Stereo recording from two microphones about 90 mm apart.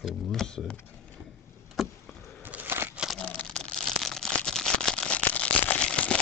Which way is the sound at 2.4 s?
20° right (ahead or behind).